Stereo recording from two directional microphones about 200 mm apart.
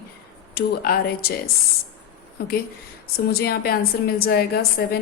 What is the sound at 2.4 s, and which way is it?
A woman's voice, 50° left (ahead or behind).